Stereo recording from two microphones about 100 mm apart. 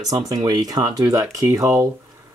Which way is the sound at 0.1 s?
40° right (ahead or behind).